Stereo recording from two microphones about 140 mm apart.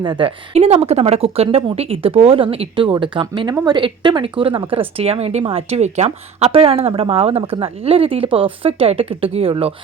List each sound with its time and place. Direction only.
0.0 s speech: 35° right (ahead or behind)
3.8 s speech: 35° right (ahead or behind)